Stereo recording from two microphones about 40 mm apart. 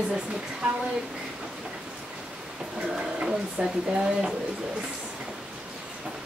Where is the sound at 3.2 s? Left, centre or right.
Right.